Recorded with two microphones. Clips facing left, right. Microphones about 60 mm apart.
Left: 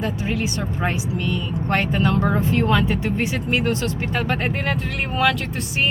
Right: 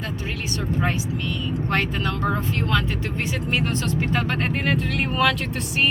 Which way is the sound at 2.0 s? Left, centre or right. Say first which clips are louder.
Left 4 dB; centre.